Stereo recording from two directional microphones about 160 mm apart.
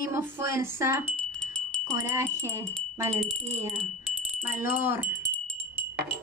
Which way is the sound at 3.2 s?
Centre (ahead or behind).